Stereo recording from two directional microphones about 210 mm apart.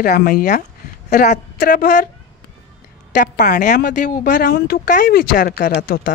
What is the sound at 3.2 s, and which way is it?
A woman's voice, 40° left (ahead or behind).